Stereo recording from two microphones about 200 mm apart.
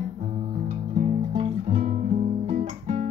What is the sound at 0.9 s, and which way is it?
Guitar, 35° right (ahead or behind).